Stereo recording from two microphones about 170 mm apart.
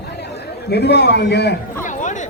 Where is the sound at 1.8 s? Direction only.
45° left (ahead or behind).